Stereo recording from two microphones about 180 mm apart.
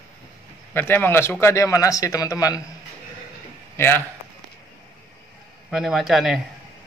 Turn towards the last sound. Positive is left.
turn(degrees=0)  # may be behind; listen again after turning